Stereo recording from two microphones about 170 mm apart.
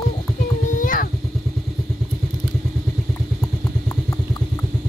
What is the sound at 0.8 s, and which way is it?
Cat, 55° left (ahead or behind).